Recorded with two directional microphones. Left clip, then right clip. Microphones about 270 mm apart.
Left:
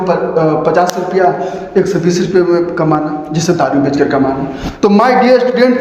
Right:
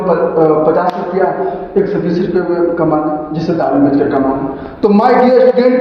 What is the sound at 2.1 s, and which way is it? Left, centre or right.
Speech, left.